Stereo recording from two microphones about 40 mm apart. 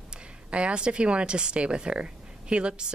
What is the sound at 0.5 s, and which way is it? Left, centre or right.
Speech, right.